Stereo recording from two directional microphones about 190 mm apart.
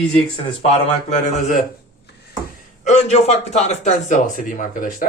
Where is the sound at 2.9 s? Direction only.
35° left (ahead or behind).